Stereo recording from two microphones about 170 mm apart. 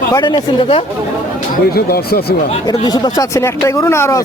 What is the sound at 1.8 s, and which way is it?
Speech, 65° left (ahead or behind).